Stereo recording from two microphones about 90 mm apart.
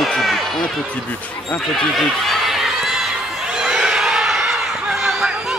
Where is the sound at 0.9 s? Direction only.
15° left (ahead or behind).